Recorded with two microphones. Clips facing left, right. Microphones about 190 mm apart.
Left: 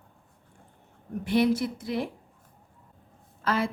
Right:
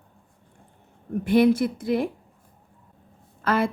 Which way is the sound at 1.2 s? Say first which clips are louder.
Right 5 dB; 50° right (ahead or behind).